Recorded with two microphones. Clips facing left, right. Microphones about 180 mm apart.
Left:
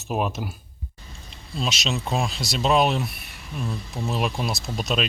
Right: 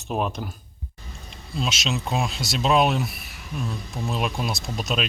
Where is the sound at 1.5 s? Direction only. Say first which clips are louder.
Even; centre (ahead or behind).